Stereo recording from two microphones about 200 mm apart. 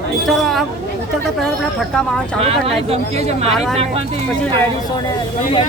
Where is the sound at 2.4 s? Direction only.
30° right (ahead or behind).